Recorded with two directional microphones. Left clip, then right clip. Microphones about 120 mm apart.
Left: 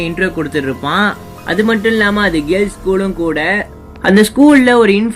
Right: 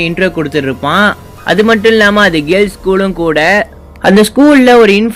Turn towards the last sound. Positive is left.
turn(degrees=-45)  # may be behind; listen again after turning